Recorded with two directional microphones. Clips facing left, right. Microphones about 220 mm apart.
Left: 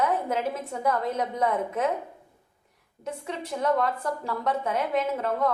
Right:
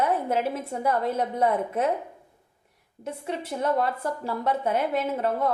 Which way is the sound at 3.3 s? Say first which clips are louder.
Even; 30° right (ahead or behind).